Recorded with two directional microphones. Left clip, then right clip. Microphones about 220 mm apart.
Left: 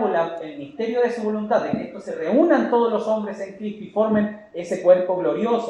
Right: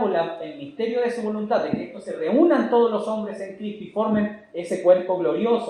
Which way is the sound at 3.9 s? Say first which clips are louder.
Left 3 dB; 30° right (ahead or behind).